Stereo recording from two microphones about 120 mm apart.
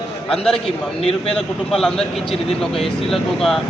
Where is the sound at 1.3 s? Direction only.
5° left (ahead or behind).